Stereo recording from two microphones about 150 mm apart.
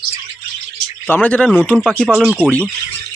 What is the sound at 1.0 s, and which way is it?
Speech, 10° left (ahead or behind).